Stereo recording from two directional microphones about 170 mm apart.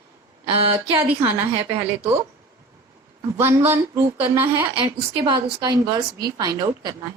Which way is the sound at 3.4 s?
15° right (ahead or behind).